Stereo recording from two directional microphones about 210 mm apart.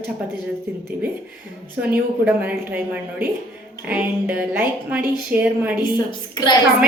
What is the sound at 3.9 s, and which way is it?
A woman's voice, 5° right (ahead or behind).